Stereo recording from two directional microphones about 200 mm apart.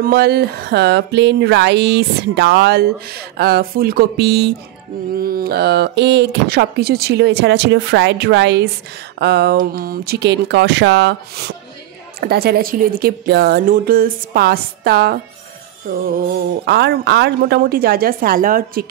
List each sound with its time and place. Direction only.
0.0 s a sound: 50° right (ahead or behind)
12.2 s a woman's voice: 50° right (ahead or behind)
16.6 s a woman's voice: 55° right (ahead or behind)